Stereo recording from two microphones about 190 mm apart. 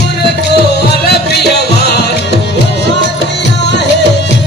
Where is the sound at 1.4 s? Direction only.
60° left (ahead or behind).